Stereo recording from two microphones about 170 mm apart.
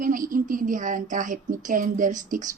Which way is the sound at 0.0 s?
50° right (ahead or behind).